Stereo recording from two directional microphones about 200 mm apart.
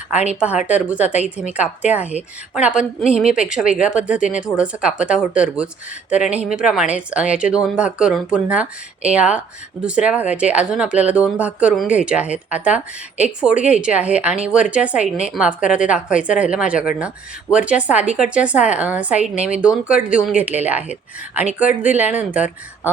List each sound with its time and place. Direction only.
0.3 s speech: 5° right (ahead or behind)